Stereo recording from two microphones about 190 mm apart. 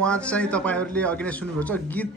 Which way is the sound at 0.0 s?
5° left (ahead or behind).